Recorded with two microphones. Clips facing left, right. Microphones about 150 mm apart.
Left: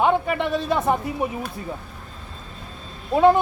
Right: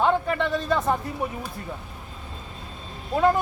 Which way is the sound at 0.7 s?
15° left (ahead or behind).